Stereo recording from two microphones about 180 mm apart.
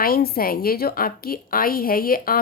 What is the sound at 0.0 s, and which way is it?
A woman's voice, 55° left (ahead or behind).